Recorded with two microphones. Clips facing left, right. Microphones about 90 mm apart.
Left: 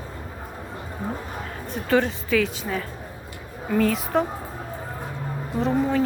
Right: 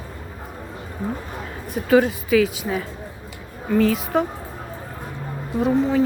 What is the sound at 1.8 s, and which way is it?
A woman's voice, 5° right (ahead or behind).